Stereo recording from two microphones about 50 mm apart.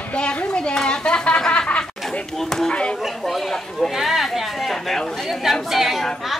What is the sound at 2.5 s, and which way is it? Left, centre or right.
A woman's voice, centre.